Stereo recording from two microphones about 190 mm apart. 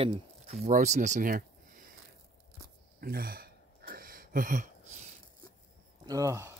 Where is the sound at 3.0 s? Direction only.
50° right (ahead or behind).